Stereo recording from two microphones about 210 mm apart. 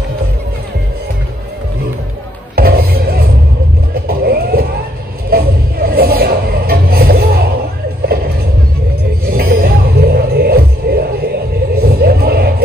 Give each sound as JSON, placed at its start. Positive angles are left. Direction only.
{"t": 2.5, "sound": "music", "side_deg": -45}
{"t": 4.1, "sound": "vehicle", "side_deg": -45}
{"t": 5.3, "sound": "music", "side_deg": -45}
{"t": 9.2, "sound": "music", "side_deg": -45}